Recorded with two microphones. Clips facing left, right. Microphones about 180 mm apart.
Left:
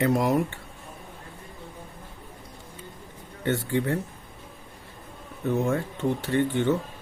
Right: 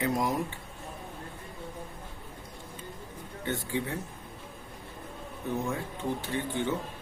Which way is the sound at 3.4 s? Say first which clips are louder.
Left 7 dB; 70° left (ahead or behind).